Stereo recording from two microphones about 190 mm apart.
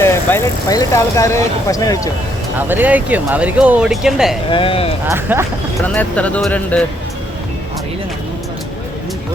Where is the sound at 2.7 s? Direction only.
10° right (ahead or behind).